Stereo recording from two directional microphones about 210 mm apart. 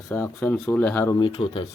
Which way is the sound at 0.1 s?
10° left (ahead or behind).